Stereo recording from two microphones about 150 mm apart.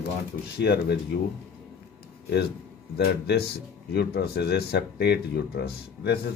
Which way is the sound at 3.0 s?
90° left.